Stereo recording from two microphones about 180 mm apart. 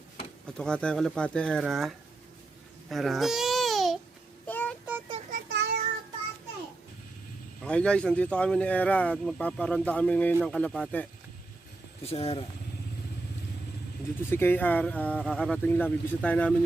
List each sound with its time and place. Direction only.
0.4 s speech: 5° left (ahead or behind)
2.9 s babbling: centre (ahead or behind)
4.4 s a sound: 10° left (ahead or behind)
5.3 s child singing: 65° right (ahead or behind)
7.6 s a man's voice: 5° left (ahead or behind)
12.0 s speech: 35° left (ahead or behind)
14.2 s a man's voice: 15° left (ahead or behind)